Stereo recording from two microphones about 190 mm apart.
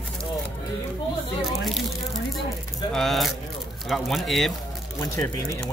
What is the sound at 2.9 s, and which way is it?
Speech, centre (ahead or behind).